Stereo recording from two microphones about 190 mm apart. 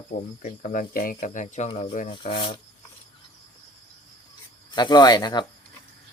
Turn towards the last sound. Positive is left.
turn(degrees=20)  # may be behind; listen again after turning